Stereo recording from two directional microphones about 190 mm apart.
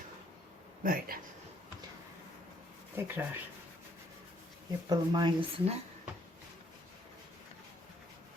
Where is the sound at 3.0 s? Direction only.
10° right (ahead or behind).